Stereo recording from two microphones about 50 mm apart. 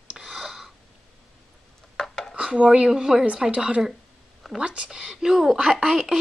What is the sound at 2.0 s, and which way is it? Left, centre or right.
Dishes, centre.